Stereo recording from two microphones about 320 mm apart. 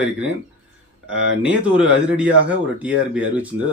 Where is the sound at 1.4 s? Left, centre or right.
Centre.